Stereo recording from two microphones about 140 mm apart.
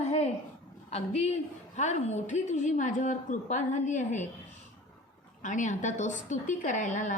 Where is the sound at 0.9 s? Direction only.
50° left (ahead or behind).